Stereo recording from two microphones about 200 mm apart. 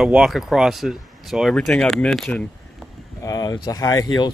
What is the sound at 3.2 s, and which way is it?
Speech, 15° left (ahead or behind).